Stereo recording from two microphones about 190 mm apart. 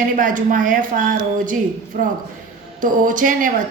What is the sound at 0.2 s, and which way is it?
Speech, 45° right (ahead or behind).